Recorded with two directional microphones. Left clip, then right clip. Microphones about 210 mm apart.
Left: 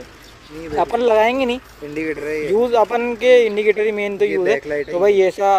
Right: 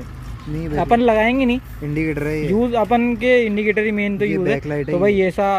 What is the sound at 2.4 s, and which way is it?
Speech, 15° left (ahead or behind).